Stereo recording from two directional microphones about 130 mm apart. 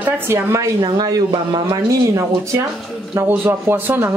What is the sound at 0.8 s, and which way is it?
Speech, 30° right (ahead or behind).